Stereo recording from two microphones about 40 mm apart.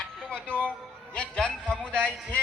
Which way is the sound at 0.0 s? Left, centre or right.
Left.